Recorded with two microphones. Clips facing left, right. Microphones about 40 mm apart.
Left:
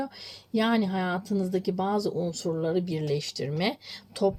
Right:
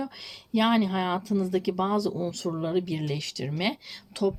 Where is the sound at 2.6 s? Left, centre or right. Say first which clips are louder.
Right 1 dB; right.